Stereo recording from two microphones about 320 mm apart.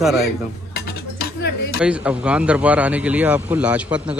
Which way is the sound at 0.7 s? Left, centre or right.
Left.